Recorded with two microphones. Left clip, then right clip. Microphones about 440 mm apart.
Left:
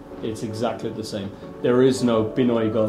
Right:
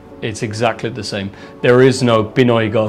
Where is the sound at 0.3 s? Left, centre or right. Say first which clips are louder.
Right 8 dB; right.